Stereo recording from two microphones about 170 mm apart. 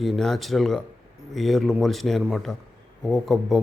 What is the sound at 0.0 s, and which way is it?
A man's voice, centre (ahead or behind).